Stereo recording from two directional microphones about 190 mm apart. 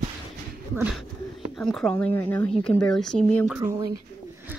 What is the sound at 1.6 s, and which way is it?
Speech, 5° left (ahead or behind).